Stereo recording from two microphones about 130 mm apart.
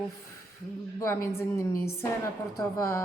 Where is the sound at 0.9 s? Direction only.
20° left (ahead or behind).